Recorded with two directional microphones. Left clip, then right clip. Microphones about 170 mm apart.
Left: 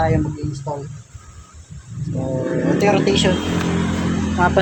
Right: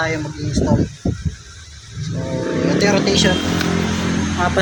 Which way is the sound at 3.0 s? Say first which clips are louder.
Right 1 dB; 45° left (ahead or behind).